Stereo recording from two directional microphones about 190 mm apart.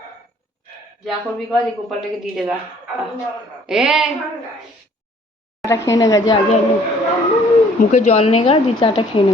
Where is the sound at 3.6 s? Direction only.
5° right (ahead or behind).